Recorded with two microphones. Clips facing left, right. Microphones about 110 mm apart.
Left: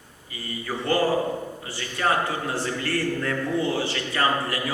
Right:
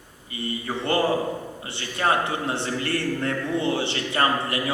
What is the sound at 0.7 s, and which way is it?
A man's voice, 25° right (ahead or behind).